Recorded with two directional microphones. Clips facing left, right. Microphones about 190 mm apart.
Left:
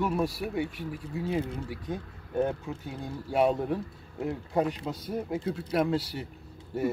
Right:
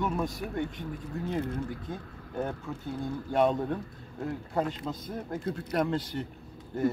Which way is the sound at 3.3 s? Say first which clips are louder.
Left 1 dB; 5° left (ahead or behind).